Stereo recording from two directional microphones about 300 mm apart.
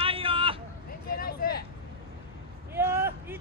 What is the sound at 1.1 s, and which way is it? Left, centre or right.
Vehicle, left.